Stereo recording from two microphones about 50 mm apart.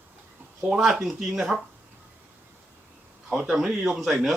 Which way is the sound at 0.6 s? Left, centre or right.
Right.